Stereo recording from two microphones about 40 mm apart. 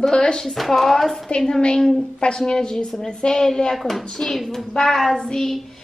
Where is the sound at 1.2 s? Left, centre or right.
Left.